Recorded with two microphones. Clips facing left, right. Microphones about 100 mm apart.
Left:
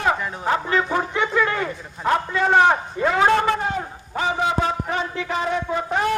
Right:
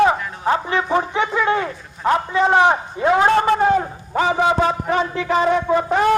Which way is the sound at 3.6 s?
60° right (ahead or behind).